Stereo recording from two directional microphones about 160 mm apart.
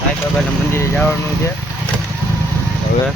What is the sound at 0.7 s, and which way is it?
Speech, 15° left (ahead or behind).